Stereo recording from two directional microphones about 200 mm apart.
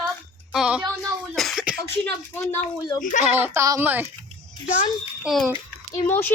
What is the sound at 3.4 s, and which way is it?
Speech, 15° right (ahead or behind).